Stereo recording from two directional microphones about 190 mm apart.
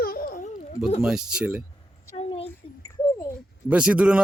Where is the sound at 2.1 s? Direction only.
35° left (ahead or behind).